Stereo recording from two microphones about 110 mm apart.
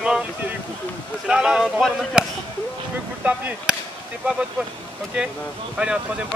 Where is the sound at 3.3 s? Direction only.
10° right (ahead or behind).